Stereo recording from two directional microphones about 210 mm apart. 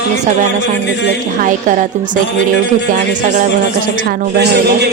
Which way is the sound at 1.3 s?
40° right (ahead or behind).